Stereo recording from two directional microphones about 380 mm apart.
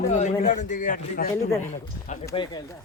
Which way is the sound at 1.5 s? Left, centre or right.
Centre.